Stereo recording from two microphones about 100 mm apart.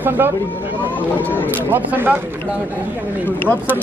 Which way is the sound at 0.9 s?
15° left (ahead or behind).